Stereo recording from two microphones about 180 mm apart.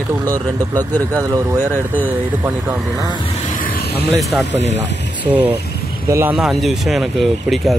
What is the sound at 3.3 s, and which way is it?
Vehicle, 45° left (ahead or behind).